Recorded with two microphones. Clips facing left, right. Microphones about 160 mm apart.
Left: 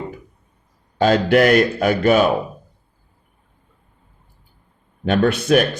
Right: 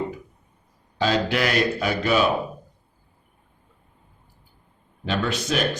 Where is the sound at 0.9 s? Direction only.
50° left (ahead or behind).